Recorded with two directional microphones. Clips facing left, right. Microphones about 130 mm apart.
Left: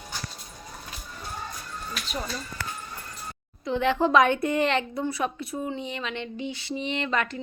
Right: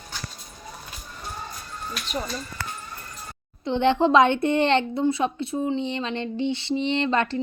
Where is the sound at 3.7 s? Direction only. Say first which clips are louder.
Right 3 dB; 30° right (ahead or behind).